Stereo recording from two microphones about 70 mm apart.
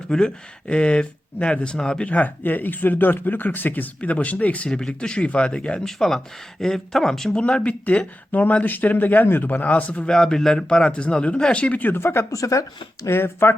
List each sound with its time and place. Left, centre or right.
0.1 s speech: centre
10.2 s speech: centre
11.9 s speech: left
12.3 s speech: left
13.1 s speech: left